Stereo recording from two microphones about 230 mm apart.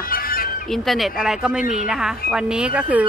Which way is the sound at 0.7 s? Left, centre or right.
Centre.